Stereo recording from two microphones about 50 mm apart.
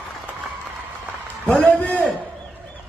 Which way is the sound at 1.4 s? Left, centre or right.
Left.